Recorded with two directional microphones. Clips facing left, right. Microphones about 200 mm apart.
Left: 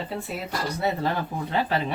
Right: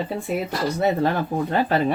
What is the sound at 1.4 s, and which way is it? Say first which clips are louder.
Speech: right 3 dB; 50° right (ahead or behind).